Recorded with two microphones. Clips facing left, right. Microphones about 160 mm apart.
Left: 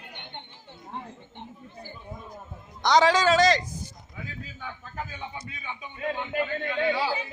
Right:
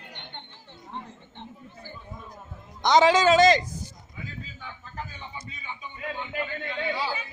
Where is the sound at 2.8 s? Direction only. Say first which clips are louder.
Right 2 dB; 20° right (ahead or behind).